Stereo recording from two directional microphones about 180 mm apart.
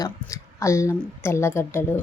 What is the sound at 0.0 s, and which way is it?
A woman's voice, 15° left (ahead or behind).